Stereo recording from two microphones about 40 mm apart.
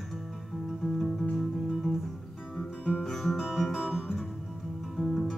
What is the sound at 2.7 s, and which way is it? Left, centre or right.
Music, left.